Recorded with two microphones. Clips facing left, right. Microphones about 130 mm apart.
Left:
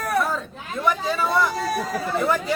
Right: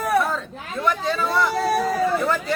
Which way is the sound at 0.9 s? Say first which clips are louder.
Even; 5° left (ahead or behind).